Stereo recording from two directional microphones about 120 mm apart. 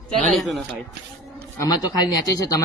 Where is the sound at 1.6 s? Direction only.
35° left (ahead or behind).